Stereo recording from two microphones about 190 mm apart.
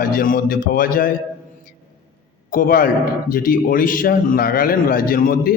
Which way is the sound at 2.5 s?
50° left (ahead or behind).